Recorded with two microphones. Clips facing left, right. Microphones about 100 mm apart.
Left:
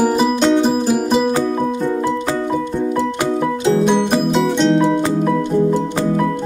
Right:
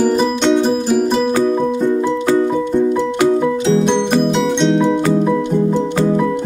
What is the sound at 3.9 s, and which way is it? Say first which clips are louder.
Music: right 1 dB; 5° left (ahead or behind).